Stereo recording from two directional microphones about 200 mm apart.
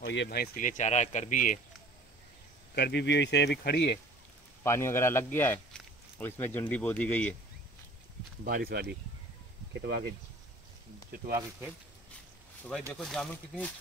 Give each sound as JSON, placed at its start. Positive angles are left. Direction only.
{"t": 0.0, "sound": "speech", "side_deg": 60}
{"t": 2.7, "sound": "speech", "side_deg": 55}
{"t": 4.6, "sound": "speech", "side_deg": 15}
{"t": 8.5, "sound": "speech", "side_deg": -50}
{"t": 12.9, "sound": "speech", "side_deg": 0}